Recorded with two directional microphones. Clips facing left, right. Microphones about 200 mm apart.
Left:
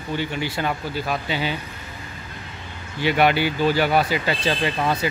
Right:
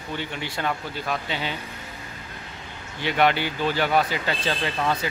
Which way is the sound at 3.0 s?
10° left (ahead or behind).